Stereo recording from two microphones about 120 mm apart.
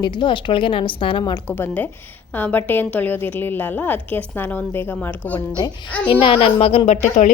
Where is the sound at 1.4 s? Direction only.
15° left (ahead or behind).